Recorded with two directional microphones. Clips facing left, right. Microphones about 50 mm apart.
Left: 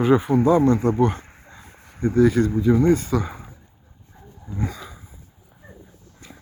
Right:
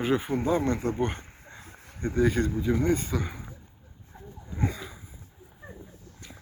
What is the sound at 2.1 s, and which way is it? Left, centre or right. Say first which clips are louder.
Speech: left 7 dB; centre.